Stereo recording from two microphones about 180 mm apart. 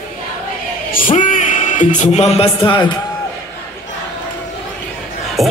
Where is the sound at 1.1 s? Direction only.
45° left (ahead or behind).